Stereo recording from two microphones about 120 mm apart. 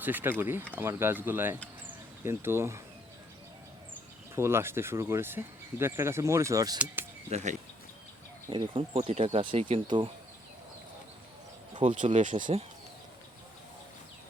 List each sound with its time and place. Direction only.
0.0 s speech: 15° right (ahead or behind)
4.4 s speech: 20° right (ahead or behind)
7.3 s speech: 70° right (ahead or behind)
8.7 s speech: 55° right (ahead or behind)
9.4 s speech: 45° right (ahead or behind)
11.9 s speech: 80° right